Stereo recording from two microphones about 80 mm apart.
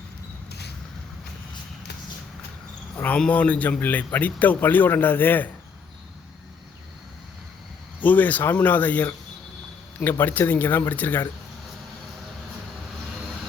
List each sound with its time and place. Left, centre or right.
3.2 s a man's voice: centre
8.0 s a man's voice: left